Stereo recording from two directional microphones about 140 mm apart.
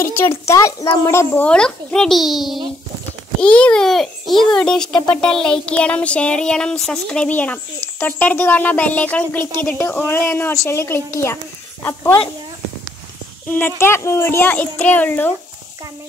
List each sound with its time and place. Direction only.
0.0 s a child's voice: 20° left (ahead or behind); by 2.6 s centre (ahead or behind)
3.3 s a child's voice: 10° left (ahead or behind)
13.5 s speech: 15° left (ahead or behind)